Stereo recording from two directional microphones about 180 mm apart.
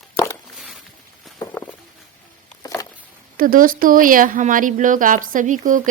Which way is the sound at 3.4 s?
50° right (ahead or behind).